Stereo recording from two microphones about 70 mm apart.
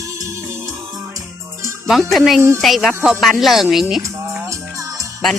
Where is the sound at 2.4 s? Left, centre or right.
Right.